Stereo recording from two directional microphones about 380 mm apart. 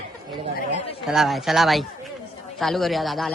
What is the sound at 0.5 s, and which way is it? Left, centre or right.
Speech, centre.